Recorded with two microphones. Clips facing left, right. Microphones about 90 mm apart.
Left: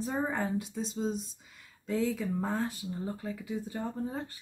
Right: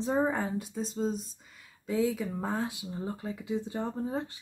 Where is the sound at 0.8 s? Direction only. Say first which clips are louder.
Right 1 dB; centre (ahead or behind).